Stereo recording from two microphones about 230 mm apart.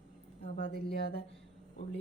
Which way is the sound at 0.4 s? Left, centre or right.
Left.